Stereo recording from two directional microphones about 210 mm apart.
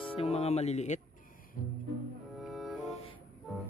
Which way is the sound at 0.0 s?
30° left (ahead or behind).